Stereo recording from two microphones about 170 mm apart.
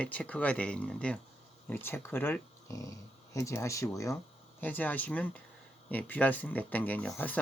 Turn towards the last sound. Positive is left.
turn(degrees=10)  # may be behind; listen again after turning